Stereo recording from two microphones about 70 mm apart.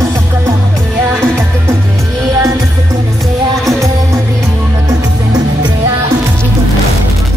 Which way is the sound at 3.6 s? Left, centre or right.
Right.